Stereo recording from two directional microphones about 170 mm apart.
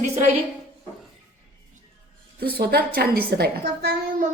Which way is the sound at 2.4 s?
70° right (ahead or behind).